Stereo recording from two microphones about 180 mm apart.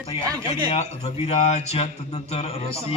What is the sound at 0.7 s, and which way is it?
A man's voice, 35° left (ahead or behind).